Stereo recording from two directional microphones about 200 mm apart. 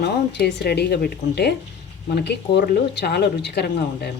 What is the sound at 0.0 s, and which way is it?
Speech, 55° left (ahead or behind).